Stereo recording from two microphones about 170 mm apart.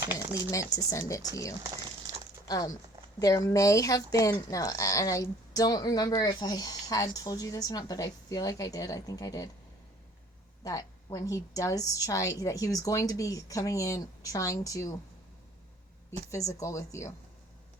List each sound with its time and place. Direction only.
0.5 s speech: 20° left (ahead or behind)
10.6 s speech: 20° left (ahead or behind)
16.5 s speech: 20° left (ahead or behind)